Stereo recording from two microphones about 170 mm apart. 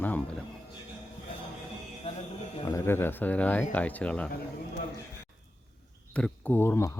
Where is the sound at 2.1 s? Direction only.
40° left (ahead or behind).